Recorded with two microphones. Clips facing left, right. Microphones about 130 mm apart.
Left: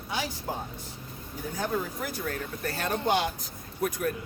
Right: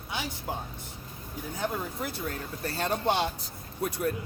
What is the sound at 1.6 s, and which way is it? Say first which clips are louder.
Speech: left 2 dB; 25° right (ahead or behind).